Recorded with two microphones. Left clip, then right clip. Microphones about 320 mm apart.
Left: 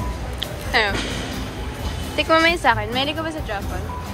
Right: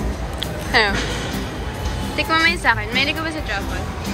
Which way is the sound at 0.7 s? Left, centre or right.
Centre.